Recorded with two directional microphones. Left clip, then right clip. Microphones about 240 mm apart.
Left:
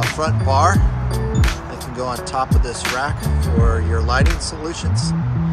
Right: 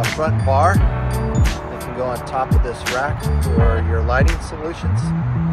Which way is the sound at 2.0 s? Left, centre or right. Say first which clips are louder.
Even; centre.